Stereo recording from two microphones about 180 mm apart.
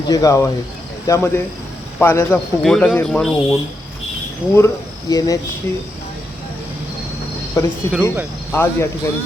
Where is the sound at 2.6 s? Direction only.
Centre (ahead or behind).